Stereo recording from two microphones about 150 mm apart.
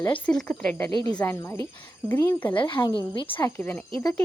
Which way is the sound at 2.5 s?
35° left (ahead or behind).